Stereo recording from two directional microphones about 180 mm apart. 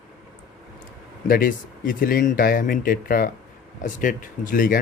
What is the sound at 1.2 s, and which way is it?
Speech, 50° left (ahead or behind).